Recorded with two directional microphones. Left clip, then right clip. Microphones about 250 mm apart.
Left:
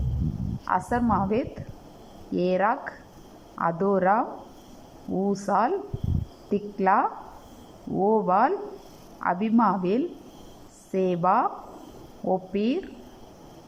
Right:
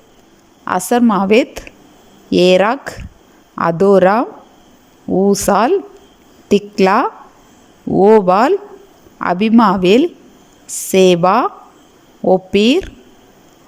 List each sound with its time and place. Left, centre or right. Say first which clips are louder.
0.6 s a woman's voice: right 11 dB; right